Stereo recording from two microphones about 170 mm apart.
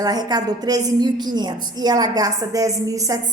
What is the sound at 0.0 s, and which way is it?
A woman's voice, 25° right (ahead or behind).